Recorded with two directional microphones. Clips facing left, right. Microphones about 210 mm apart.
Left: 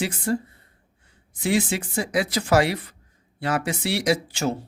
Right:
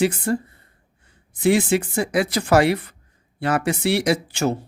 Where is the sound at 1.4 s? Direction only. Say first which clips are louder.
Right 5 dB; 60° right (ahead or behind).